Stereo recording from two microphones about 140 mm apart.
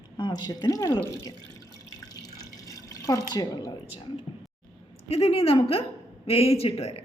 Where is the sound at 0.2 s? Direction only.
30° left (ahead or behind).